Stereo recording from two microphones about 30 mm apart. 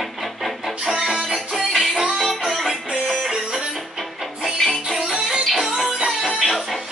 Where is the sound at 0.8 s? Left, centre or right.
Right.